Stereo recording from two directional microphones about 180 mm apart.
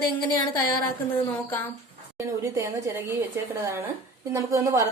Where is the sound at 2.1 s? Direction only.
15° right (ahead or behind).